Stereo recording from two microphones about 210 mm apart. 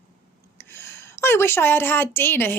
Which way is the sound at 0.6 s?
10° left (ahead or behind).